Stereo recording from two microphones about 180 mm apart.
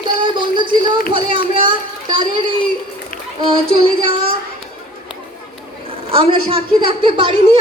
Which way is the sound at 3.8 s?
30° right (ahead or behind).